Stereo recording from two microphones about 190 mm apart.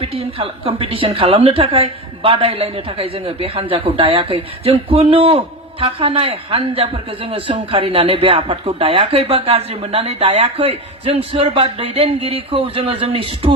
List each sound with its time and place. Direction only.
0.0 s a woman's voice: 30° right (ahead or behind)